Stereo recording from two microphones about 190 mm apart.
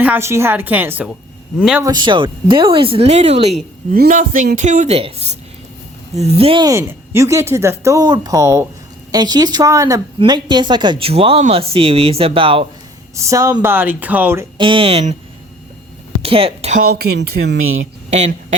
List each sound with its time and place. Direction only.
0.0 s speech: 10° right (ahead or behind)
1.8 s a woman's voice: 20° right (ahead or behind)
3.9 s a woman's voice: 50° right (ahead or behind); by 12.6 s 30° right (ahead or behind)
13.1 s speech: 15° right (ahead or behind)
14.6 s a woman's voice: 25° right (ahead or behind)
16.2 s speech: 30° right (ahead or behind)
16.8 s speech: 55° right (ahead or behind); by 17.8 s 90° right
18.1 s speech: 35° right (ahead or behind)